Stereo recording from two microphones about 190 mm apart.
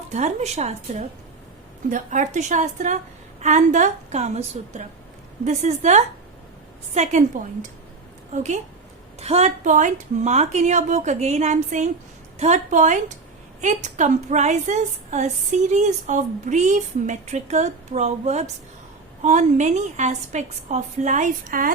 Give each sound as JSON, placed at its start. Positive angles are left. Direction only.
{"t": 0.1, "sound": "a woman's voice", "side_deg": -35}